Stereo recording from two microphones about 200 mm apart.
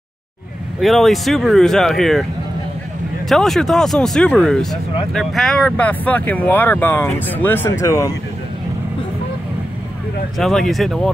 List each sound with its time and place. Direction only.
0.7 s speech: centre (ahead or behind)
3.3 s speech: centre (ahead or behind); by 8.1 s 15° left (ahead or behind)
10.3 s speech: centre (ahead or behind)